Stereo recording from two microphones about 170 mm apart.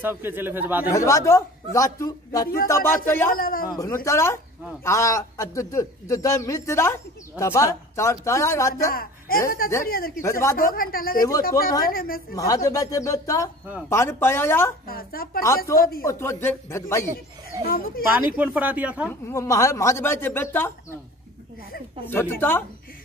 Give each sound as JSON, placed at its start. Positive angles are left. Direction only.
{"t": 0.0, "sound": "a man's voice", "side_deg": -10}
{"t": 0.9, "sound": "a man's voice", "side_deg": 20}
{"t": 2.4, "sound": "speech", "side_deg": 60}
{"t": 2.7, "sound": "a man's voice", "side_deg": 15}
{"t": 3.3, "sound": "speech", "side_deg": 60}
{"t": 3.7, "sound": "a man's voice", "side_deg": 15}
{"t": 8.9, "sound": "a man's voice", "side_deg": 60}
{"t": 12.4, "sound": "a man's voice", "side_deg": 20}
{"t": 14.9, "sound": "speech", "side_deg": 60}
{"t": 16.1, "sound": "a man's voice", "side_deg": 15}
{"t": 17.6, "sound": "speech", "side_deg": 60}
{"t": 18.4, "sound": "a man's voice", "side_deg": -10}
{"t": 19.2, "sound": "a man's voice", "side_deg": 20}
{"t": 22.0, "sound": "a man's voice", "side_deg": 15}